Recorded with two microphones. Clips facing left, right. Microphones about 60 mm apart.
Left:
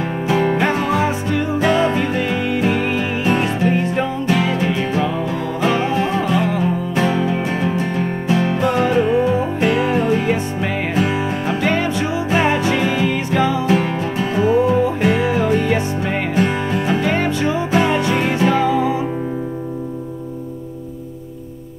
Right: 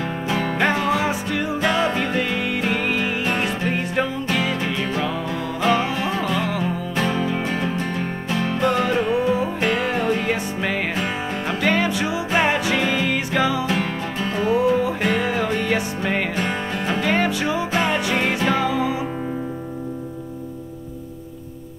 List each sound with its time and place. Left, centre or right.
0.3 s music: left
0.6 s music: centre
4.0 s music: centre
12.4 s music: centre
12.7 s music: centre
17.3 s music: centre
17.6 s music: centre